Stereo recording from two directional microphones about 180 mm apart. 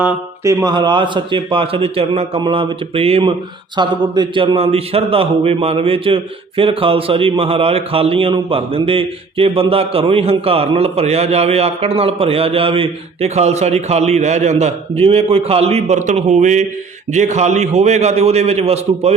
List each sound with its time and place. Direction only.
0.0 s mantra: 5° right (ahead or behind)
0.6 s a man's voice: 25° right (ahead or behind)